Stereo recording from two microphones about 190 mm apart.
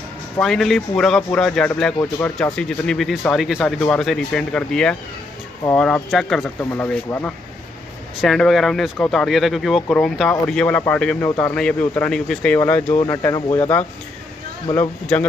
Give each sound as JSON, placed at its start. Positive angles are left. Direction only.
{"t": 0.4, "sound": "speech", "side_deg": 0}